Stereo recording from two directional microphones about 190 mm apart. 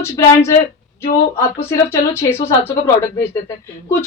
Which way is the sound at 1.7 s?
15° left (ahead or behind).